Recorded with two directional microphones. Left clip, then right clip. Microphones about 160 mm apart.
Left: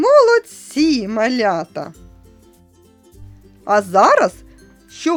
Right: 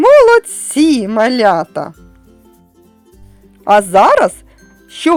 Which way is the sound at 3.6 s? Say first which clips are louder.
Right 5 dB; 30° right (ahead or behind).